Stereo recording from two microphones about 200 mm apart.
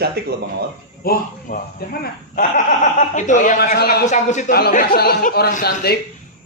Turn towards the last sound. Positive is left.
turn(degrees=50)  # may be behind; listen again after turning